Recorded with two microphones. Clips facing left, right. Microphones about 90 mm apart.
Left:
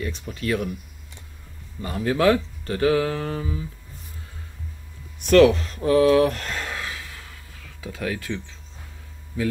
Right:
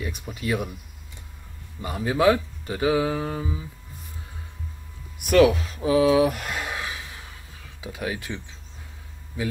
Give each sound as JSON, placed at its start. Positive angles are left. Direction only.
{"t": 0.0, "sound": "speech", "side_deg": -15}
{"t": 1.8, "sound": "speech", "side_deg": -15}
{"t": 5.2, "sound": "speech", "side_deg": -10}